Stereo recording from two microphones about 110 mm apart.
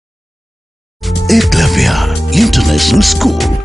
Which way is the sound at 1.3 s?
Centre (ahead or behind).